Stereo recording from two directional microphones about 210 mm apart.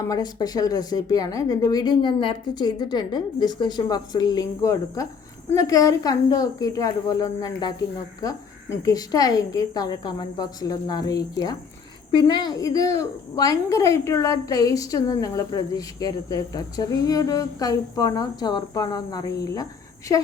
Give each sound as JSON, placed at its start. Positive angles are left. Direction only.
{"t": 0.0, "sound": "a woman's voice", "side_deg": 15}
{"t": 8.8, "sound": "a woman's voice", "side_deg": 15}